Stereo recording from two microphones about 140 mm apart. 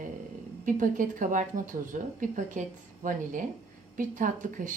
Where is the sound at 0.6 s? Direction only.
70° right (ahead or behind).